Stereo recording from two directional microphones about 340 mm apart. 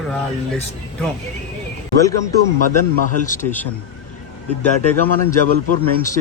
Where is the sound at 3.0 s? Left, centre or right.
Left.